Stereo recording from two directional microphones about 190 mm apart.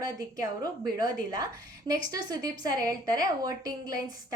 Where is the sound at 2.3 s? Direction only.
20° right (ahead or behind).